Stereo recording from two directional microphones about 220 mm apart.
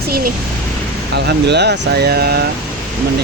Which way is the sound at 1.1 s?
50° right (ahead or behind).